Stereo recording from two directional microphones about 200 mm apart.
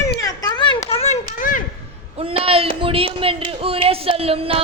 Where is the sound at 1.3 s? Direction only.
40° left (ahead or behind).